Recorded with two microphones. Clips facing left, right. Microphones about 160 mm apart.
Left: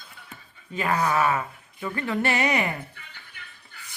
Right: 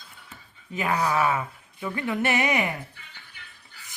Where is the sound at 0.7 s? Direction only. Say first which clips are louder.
Left 1 dB; 10° right (ahead or behind).